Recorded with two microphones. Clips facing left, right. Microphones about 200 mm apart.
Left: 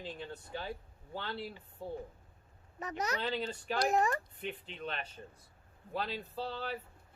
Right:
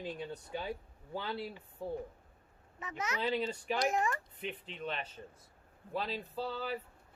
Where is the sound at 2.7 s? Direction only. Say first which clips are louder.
Left 3 dB; 40° left (ahead or behind).